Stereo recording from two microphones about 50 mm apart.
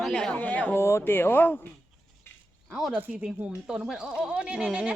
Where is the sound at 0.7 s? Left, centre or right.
Left.